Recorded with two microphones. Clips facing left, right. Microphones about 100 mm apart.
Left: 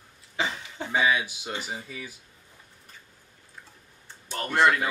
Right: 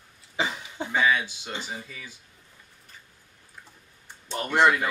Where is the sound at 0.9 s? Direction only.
15° left (ahead or behind).